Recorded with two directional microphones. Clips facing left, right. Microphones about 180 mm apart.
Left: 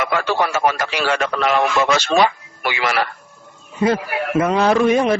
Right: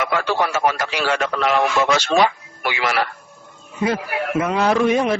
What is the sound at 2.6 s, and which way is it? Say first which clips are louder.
Speech: left 1 dB; 65° left (ahead or behind).